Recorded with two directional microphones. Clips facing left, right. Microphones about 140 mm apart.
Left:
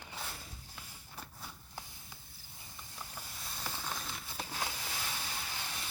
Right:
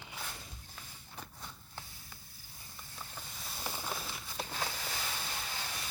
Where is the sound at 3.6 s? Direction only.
10° right (ahead or behind).